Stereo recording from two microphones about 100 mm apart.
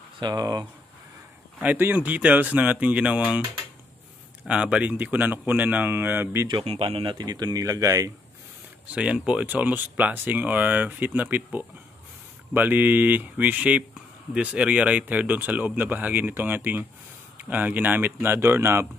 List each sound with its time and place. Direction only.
0.2 s speech: 40° right (ahead or behind)
1.6 s speech: 20° right (ahead or behind)
4.5 s speech: 10° right (ahead or behind)
6.6 s speech: 80° right; by 7.2 s 60° right (ahead or behind)
7.2 s speech: 45° right (ahead or behind)
8.9 s speech: 10° right (ahead or behind)